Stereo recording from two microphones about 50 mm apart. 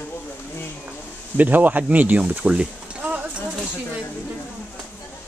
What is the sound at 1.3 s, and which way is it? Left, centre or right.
Speech, right.